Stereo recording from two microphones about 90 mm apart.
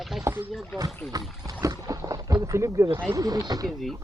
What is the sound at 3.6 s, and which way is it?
Speech, centre (ahead or behind).